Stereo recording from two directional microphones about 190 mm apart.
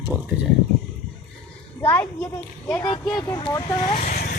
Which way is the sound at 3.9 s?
45° left (ahead or behind).